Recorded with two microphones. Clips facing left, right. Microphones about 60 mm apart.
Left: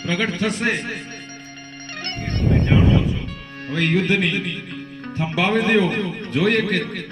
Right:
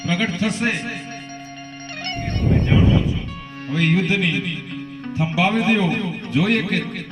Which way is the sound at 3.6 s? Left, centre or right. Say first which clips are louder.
Even; left.